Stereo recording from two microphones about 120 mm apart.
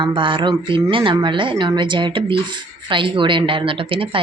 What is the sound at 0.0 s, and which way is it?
A woman's voice, 45° right (ahead or behind).